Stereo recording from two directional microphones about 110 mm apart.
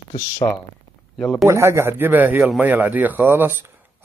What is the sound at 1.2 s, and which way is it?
Speech, centre (ahead or behind).